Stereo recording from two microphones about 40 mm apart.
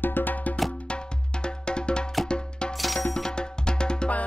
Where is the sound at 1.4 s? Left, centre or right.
Left.